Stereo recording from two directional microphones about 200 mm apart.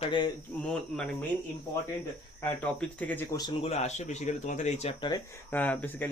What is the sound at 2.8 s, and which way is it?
Speech, 5° left (ahead or behind).